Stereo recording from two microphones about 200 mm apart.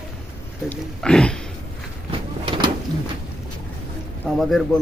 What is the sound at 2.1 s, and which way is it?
Vehicle, 25° right (ahead or behind).